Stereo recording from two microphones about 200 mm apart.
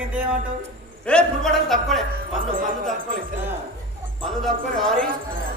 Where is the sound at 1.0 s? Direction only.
5° left (ahead or behind).